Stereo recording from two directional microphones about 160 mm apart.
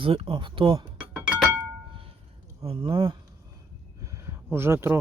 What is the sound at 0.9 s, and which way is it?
Doorbell, 10° right (ahead or behind).